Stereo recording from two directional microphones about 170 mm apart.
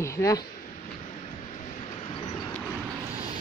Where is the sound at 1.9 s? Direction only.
30° left (ahead or behind).